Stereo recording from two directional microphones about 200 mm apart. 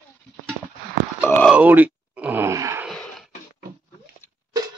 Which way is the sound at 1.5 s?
10° right (ahead or behind).